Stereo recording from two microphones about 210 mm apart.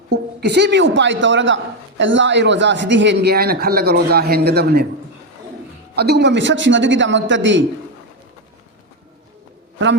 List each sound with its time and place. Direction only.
0.3 s a woman's voice: 55° right (ahead or behind)
6.0 s a woman's voice: 50° right (ahead or behind)